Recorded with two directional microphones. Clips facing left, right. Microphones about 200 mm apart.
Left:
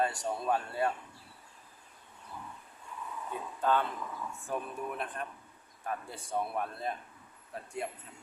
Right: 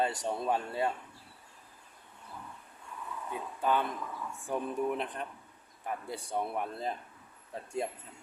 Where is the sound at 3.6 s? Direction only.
15° right (ahead or behind).